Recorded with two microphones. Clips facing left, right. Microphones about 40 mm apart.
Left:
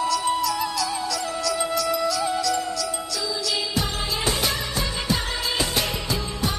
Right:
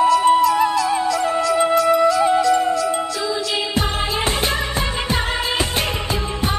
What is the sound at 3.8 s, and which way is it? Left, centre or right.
Music, right.